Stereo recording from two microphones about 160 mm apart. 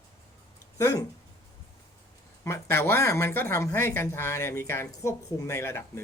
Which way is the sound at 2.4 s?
15° left (ahead or behind).